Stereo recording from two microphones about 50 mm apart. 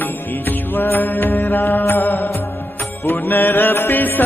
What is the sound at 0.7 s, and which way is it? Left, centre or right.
Music, left.